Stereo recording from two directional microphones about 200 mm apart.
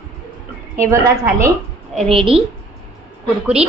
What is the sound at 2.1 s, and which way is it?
Speech, 25° right (ahead or behind).